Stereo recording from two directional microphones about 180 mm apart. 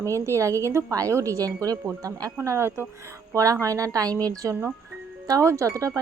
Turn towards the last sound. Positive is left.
turn(degrees=-15)  # may be behind; listen again after turning